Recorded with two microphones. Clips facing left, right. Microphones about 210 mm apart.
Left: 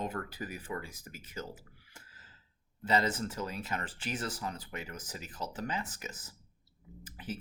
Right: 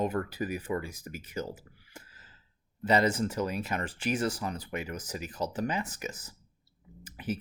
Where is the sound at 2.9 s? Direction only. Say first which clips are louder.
Right 5 dB; 15° right (ahead or behind).